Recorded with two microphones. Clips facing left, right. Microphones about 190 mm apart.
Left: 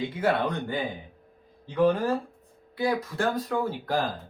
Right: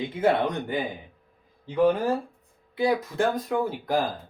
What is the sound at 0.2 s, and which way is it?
Speech, 20° right (ahead or behind).